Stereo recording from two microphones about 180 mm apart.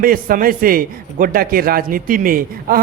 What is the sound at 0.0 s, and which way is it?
A man's voice, 50° right (ahead or behind).